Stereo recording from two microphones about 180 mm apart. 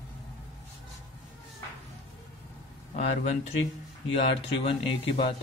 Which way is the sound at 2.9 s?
40° left (ahead or behind).